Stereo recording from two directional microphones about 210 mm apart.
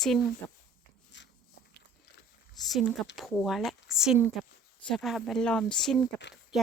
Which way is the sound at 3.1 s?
Centre (ahead or behind).